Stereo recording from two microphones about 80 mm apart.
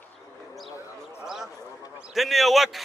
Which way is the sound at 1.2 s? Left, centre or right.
Centre.